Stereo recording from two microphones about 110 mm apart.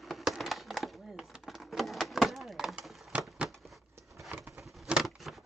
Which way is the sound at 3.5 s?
Centre (ahead or behind).